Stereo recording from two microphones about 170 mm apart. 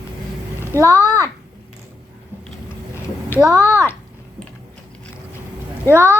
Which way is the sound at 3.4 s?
15° left (ahead or behind).